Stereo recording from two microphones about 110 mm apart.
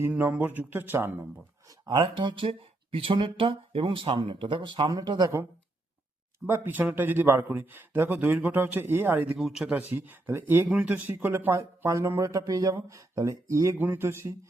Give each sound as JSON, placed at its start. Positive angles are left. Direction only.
{"t": 0.1, "sound": "speech", "side_deg": -15}
{"t": 1.6, "sound": "speech", "side_deg": -45}
{"t": 4.9, "sound": "speech", "side_deg": -35}
{"t": 6.4, "sound": "speech", "side_deg": -15}
{"t": 9.4, "sound": "speech", "side_deg": -5}
{"t": 9.9, "sound": "speech", "side_deg": -20}